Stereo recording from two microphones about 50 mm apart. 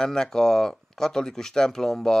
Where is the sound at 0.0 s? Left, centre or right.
Centre.